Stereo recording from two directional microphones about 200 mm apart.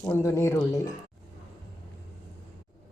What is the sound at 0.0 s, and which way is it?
Speech, 10° left (ahead or behind).